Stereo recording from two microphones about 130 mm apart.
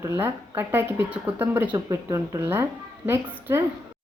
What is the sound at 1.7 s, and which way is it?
Speech, 25° right (ahead or behind).